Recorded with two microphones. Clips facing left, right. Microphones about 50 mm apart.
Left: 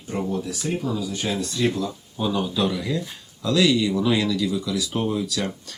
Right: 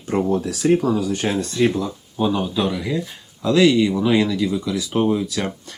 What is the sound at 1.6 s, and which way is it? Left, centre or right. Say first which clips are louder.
Speech: right 3 dB; centre.